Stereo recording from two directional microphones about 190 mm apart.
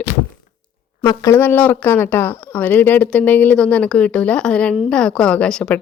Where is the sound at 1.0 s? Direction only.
20° left (ahead or behind).